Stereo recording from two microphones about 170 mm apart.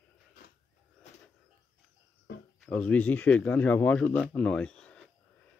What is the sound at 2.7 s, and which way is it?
Speech, 5° left (ahead or behind).